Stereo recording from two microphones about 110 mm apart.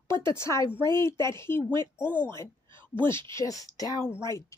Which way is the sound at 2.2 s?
20° left (ahead or behind).